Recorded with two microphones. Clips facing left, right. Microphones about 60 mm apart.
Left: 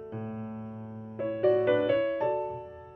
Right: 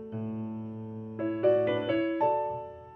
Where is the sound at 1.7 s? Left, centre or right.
Centre.